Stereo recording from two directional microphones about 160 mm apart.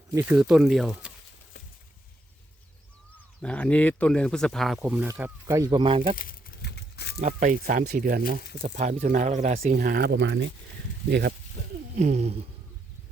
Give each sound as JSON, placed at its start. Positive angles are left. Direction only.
{"t": 0.1, "sound": "speech", "side_deg": -15}
{"t": 3.4, "sound": "speech", "side_deg": 10}
{"t": 5.8, "sound": "speech", "side_deg": -35}
{"t": 6.1, "sound": "a sound", "side_deg": 75}
{"t": 7.2, "sound": "speech", "side_deg": -50}
{"t": 8.3, "sound": "speech", "side_deg": -50}
{"t": 9.7, "sound": "speech", "side_deg": -75}
{"t": 11.1, "sound": "speech", "side_deg": -90}
{"t": 11.9, "sound": "speech", "side_deg": -50}